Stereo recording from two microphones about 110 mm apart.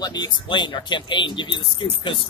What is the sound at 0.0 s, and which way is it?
Speech, 40° left (ahead or behind).